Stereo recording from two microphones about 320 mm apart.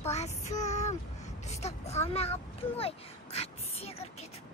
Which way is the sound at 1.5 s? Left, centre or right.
Centre.